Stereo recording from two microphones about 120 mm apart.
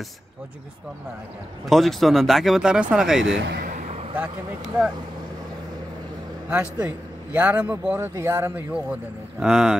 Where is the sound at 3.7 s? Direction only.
70° right (ahead or behind).